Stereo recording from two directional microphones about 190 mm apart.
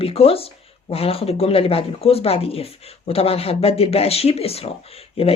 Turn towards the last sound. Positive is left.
turn(degrees=30)  # may be behind; listen again after turning